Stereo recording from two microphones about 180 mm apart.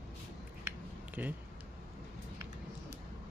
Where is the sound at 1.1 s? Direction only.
10° right (ahead or behind).